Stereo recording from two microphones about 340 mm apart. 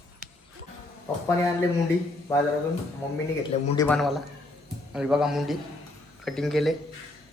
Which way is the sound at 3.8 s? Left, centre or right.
Centre.